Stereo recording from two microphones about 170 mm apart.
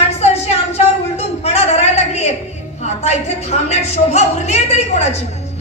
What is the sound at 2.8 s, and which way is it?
A woman's voice, 40° left (ahead or behind).